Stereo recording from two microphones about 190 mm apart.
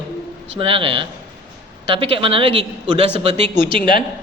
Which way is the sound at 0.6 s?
30° right (ahead or behind).